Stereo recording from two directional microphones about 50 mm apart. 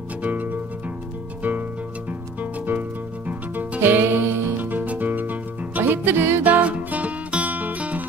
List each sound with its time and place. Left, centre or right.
0.2 s music: right
3.8 s music: right
4.6 s music: right
6.4 s music: right